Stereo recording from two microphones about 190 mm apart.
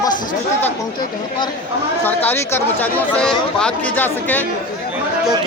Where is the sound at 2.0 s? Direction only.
10° left (ahead or behind).